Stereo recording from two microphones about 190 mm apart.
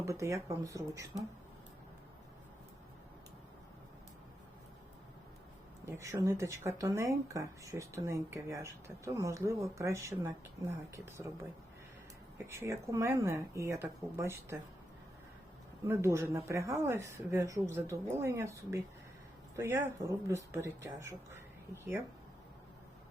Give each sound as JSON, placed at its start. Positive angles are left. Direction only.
{"t": 0.0, "sound": "speech", "side_deg": -15}
{"t": 5.8, "sound": "speech", "side_deg": -15}
{"t": 12.5, "sound": "speech", "side_deg": -15}
{"t": 15.9, "sound": "speech", "side_deg": -15}